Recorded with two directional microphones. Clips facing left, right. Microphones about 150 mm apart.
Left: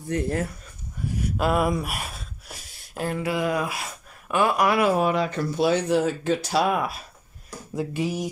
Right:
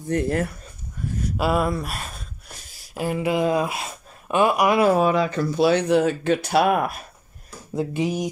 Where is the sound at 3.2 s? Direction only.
25° right (ahead or behind).